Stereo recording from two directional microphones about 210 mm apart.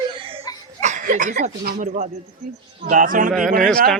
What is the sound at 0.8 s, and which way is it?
Speech, 35° right (ahead or behind).